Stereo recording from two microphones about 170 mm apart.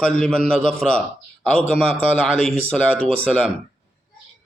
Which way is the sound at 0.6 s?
35° right (ahead or behind).